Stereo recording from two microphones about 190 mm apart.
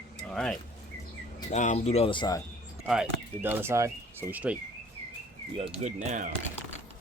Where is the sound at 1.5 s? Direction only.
40° left (ahead or behind); by 2.4 s 20° left (ahead or behind).